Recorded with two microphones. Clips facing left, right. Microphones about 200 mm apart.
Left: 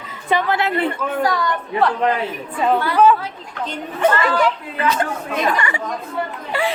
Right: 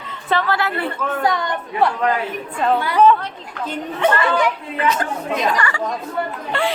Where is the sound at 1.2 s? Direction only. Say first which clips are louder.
Even; 20° right (ahead or behind).